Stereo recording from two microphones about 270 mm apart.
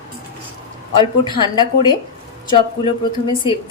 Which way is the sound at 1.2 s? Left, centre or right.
Centre.